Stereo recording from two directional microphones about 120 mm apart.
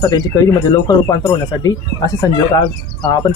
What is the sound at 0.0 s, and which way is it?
Speech, 30° left (ahead or behind).